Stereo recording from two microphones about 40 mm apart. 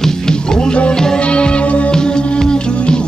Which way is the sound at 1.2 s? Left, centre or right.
Left.